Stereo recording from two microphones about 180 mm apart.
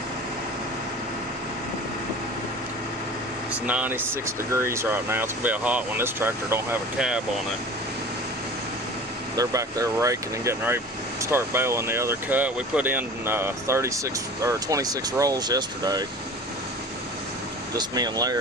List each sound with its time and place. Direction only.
3.5 s speech: 10° right (ahead or behind)
9.3 s speech: 20° right (ahead or behind)
17.7 s speech: 20° right (ahead or behind)